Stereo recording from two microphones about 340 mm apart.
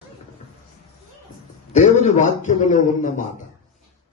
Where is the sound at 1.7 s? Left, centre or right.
Centre.